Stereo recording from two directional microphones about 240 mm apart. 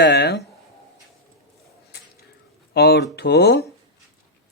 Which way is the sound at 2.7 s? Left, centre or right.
Left.